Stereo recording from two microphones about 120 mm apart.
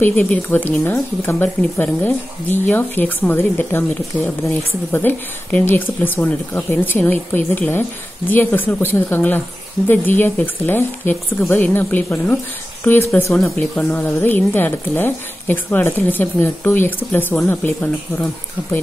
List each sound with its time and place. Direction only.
0.0 s a woman's voice: 10° left (ahead or behind)
4.9 s a woman's voice: 15° left (ahead or behind)
13.3 s speech: 5° left (ahead or behind)
13.7 s a woman's voice: 15° left (ahead or behind)